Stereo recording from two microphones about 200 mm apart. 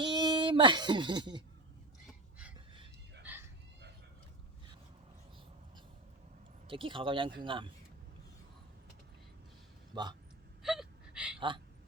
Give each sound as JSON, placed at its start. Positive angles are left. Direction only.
{"t": 0.0, "sound": "speech", "side_deg": -25}
{"t": 3.2, "sound": "a sound", "side_deg": -10}
{"t": 6.7, "sound": "speech", "side_deg": -25}
{"t": 9.9, "sound": "speech", "side_deg": -20}
{"t": 10.6, "sound": "gasp", "side_deg": 0}
{"t": 11.3, "sound": "speech", "side_deg": -25}